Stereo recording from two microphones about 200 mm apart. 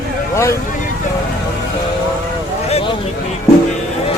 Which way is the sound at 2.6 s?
30° left (ahead or behind).